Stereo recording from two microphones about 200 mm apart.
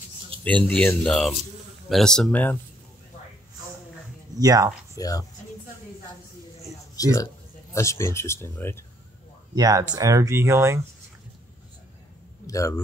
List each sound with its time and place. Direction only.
0.4 s speech: 5° left (ahead or behind)
4.4 s speech: 20° right (ahead or behind)
4.9 s speech: 15° left (ahead or behind)
7.0 s speech: 20° left (ahead or behind)
9.6 s speech: 20° right (ahead or behind)
12.4 s a man's voice: 15° left (ahead or behind)